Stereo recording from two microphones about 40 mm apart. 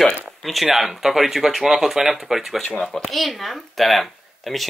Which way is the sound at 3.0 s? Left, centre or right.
Centre.